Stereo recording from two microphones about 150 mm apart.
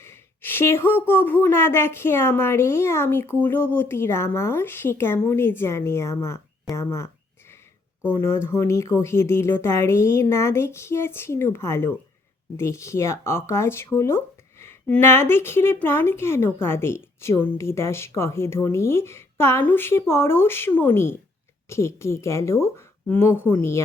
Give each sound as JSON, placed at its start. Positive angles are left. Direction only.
{"t": 0.0, "sound": "a woman's voice", "side_deg": 15}
{"t": 6.7, "sound": "a sound", "side_deg": 15}
{"t": 8.1, "sound": "a woman's voice", "side_deg": 20}